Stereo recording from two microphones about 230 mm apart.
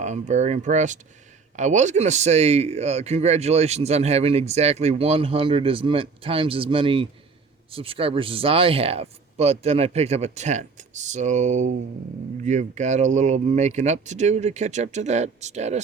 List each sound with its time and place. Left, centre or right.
0.0 s a man's voice: right